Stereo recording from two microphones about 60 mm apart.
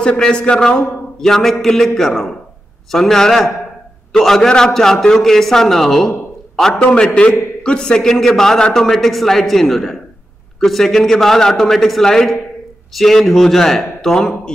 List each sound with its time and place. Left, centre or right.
0.0 s a man's voice: centre